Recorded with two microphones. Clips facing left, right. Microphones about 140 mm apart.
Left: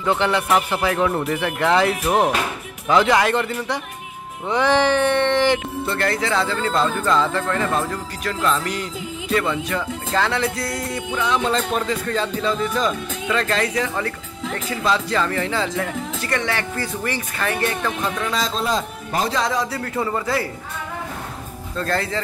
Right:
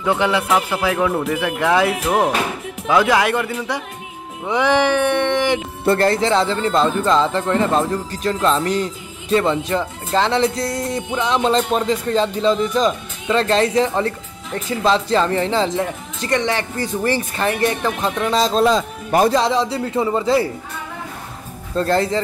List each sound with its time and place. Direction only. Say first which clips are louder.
0.0 s a man's voice: right 2 dB; 10° right (ahead or behind)
5.9 s speech: right 4 dB; 30° right (ahead or behind)
21.7 s speech: right 6 dB; 25° right (ahead or behind)